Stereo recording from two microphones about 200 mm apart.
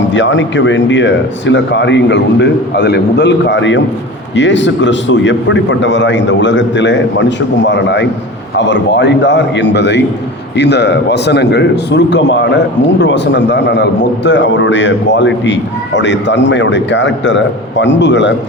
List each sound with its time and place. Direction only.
0.1 s a man's voice: 65° left (ahead or behind)